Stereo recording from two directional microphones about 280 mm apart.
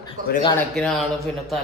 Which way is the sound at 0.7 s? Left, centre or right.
Centre.